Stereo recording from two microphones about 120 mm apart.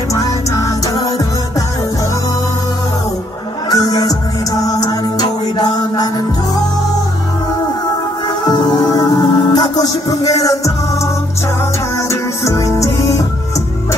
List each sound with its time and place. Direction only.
0.1 s music: 30° left (ahead or behind)
3.7 s music: 30° left (ahead or behind)
8.5 s music: 35° left (ahead or behind)
12.1 s music: 25° left (ahead or behind)